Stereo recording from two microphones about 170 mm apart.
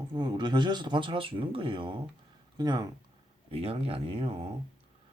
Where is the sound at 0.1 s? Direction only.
25° right (ahead or behind).